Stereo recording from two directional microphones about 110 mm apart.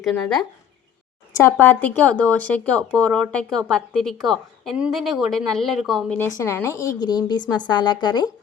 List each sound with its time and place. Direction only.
0.0 s speech: 5° left (ahead or behind)
1.3 s speech: 20° left (ahead or behind); by 6.1 s centre (ahead or behind)
6.3 s a woman's voice: 20° left (ahead or behind); by 8.3 s 40° left (ahead or behind)